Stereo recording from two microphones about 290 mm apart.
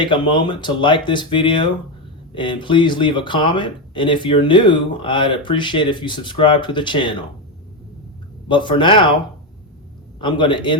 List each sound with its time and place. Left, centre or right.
0.0 s speech: centre
8.4 s speech: centre
10.2 s speech: centre